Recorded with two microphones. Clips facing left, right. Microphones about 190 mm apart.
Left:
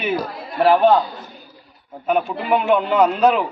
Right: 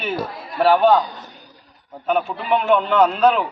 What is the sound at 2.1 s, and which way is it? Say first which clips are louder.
A man's voice: left 1 dB; 5° left (ahead or behind).